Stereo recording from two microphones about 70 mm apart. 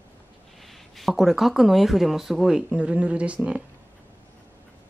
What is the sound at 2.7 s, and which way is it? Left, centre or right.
Speech, centre.